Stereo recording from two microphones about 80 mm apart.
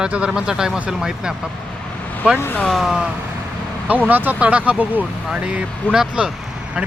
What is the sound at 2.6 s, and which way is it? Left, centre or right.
Speech, centre.